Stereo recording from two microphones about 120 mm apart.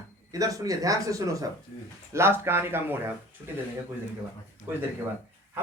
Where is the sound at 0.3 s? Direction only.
30° right (ahead or behind).